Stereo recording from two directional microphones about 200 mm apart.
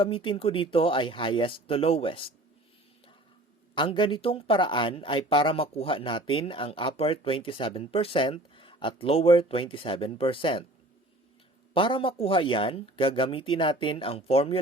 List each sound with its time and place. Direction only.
0.0 s speech: 25° left (ahead or behind)
3.8 s speech: 25° left (ahead or behind)
11.7 s speech: 25° left (ahead or behind)